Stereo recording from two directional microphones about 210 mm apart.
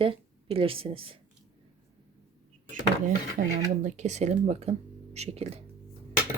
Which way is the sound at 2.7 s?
40° right (ahead or behind).